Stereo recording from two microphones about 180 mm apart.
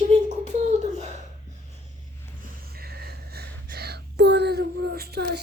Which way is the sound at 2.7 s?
60° right (ahead or behind).